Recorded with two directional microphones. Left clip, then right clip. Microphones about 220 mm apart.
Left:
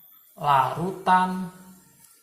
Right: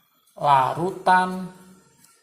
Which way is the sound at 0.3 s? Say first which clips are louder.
Right 3 dB; 35° right (ahead or behind).